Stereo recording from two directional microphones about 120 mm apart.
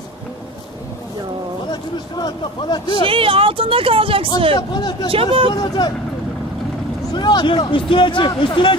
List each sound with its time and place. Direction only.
1.7 s speech: 35° left (ahead or behind)
3.0 s speech: 50° right (ahead or behind)
4.6 s speech: 35° left (ahead or behind)
5.1 s speech: 50° right (ahead or behind)
5.5 s speech: 35° left (ahead or behind)
7.2 s speech: 40° left (ahead or behind)